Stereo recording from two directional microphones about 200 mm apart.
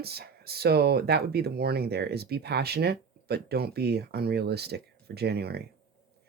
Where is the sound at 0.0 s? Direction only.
50° right (ahead or behind).